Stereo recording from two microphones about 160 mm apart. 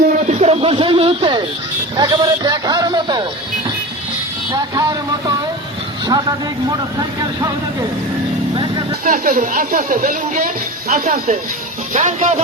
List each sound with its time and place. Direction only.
0.2 s a sound: 45° right (ahead or behind)
2.0 s a man's voice: 25° right (ahead or behind)
4.5 s a man's voice: 25° right (ahead or behind)
6.1 s a man's voice: 25° right (ahead or behind)
9.0 s speech: 55° right (ahead or behind)